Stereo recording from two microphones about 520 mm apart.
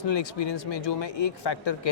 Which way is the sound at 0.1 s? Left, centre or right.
Left.